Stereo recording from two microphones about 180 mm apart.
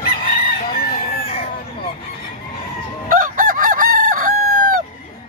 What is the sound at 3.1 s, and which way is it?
Chicken, 50° right (ahead or behind).